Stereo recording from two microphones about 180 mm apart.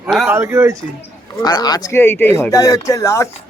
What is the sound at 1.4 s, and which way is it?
Speech, 25° left (ahead or behind).